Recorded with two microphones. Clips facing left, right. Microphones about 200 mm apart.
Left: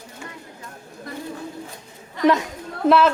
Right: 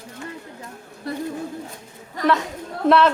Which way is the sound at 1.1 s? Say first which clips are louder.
Right 6 dB; 35° right (ahead or behind).